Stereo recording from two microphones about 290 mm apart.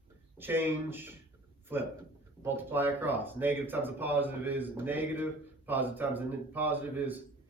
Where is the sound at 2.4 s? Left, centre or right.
Centre.